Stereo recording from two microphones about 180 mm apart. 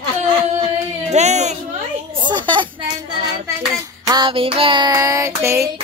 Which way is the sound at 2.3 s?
25° right (ahead or behind).